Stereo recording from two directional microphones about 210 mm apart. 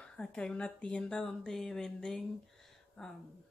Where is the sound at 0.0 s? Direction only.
5° left (ahead or behind).